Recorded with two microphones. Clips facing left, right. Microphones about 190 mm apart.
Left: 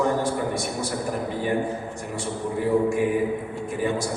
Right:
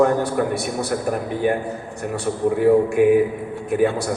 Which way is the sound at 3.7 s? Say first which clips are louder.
Right 7 dB; 65° right (ahead or behind).